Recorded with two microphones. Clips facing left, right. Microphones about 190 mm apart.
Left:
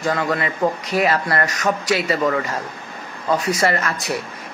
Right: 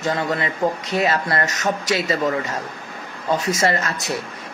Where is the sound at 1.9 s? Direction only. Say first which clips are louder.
Left 1 dB; 30° left (ahead or behind).